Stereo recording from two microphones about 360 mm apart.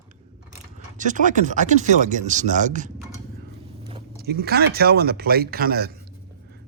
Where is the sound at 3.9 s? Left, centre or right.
Right.